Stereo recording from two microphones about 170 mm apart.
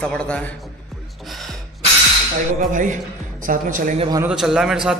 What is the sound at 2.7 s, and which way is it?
Speech, 50° right (ahead or behind).